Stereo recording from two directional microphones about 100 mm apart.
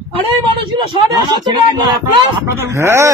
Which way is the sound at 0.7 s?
50° right (ahead or behind).